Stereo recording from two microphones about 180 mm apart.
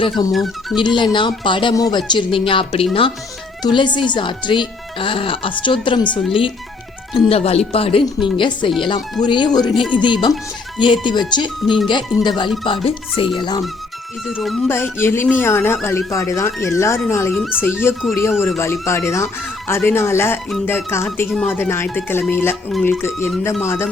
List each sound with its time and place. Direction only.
0.0 s speech: 20° left (ahead or behind)
0.3 s speech: centre (ahead or behind)
0.8 s speech: 25° left (ahead or behind)
7.3 s speech: 35° left (ahead or behind)
14.3 s speech: centre (ahead or behind)
14.7 s speech: 15° left (ahead or behind)
17.3 s speech: centre (ahead or behind)
17.6 s speech: 10° left (ahead or behind)